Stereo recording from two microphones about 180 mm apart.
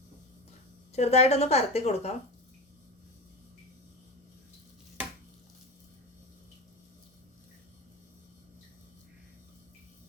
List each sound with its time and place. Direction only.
0.9 s a woman's voice: 35° left (ahead or behind)